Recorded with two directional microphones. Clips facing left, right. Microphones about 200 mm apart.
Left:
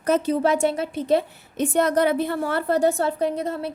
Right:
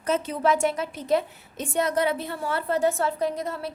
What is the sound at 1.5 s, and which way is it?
Speech, 65° left (ahead or behind).